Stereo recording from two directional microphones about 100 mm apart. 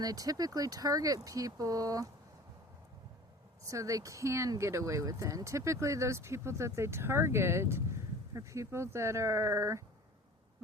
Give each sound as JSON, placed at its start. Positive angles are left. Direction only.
{"t": 0.0, "sound": "speech", "side_deg": -40}
{"t": 3.7, "sound": "speech", "side_deg": -35}